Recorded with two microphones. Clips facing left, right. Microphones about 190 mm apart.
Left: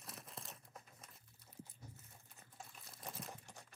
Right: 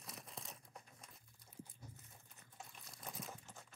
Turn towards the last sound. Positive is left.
turn(degrees=15)  # may be behind; listen again after turning